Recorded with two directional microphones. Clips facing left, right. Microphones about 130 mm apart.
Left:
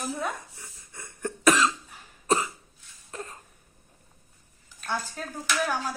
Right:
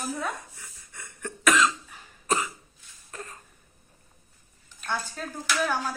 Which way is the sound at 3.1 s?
25° left (ahead or behind).